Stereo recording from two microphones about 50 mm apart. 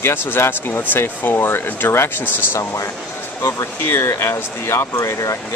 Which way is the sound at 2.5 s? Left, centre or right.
Left.